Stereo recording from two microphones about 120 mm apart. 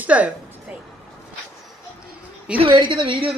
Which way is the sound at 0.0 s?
10° right (ahead or behind).